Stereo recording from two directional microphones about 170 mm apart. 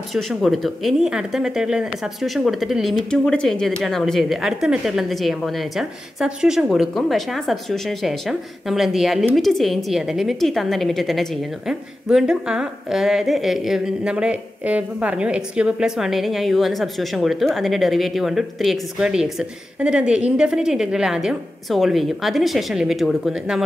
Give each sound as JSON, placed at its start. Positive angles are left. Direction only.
{"t": 0.1, "sound": "speech", "side_deg": 0}